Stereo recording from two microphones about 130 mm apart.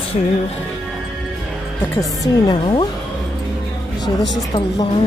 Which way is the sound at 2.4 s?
40° left (ahead or behind).